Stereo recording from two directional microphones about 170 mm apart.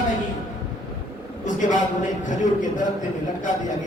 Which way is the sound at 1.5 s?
45° left (ahead or behind).